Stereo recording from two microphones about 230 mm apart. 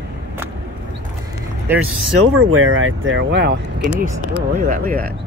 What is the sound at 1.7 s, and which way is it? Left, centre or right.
Speech, centre.